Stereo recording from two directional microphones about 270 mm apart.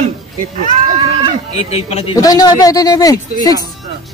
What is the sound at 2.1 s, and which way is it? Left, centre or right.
Speech, centre.